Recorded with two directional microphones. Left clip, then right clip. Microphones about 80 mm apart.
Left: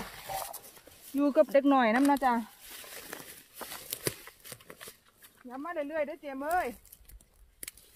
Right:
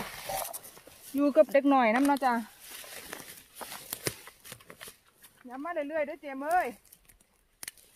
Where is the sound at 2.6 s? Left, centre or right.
Right.